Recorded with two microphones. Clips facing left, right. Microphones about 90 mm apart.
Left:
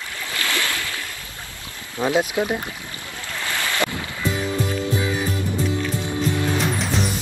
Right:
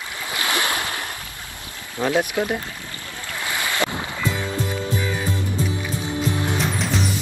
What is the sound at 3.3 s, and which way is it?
Ocean, 15° right (ahead or behind).